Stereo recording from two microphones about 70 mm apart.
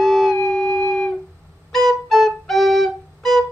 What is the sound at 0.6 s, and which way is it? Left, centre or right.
Music, left.